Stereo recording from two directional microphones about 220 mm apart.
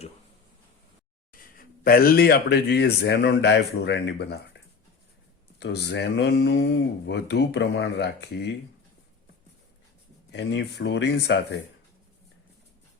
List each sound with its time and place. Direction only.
1.3 s speech: 40° left (ahead or behind)
5.5 s speech: 50° left (ahead or behind)
10.3 s speech: 50° left (ahead or behind)